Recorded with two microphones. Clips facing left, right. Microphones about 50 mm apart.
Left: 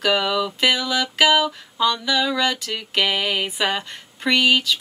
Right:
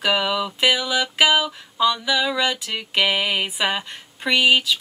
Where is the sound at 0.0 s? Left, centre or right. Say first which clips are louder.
Left 1 dB; centre.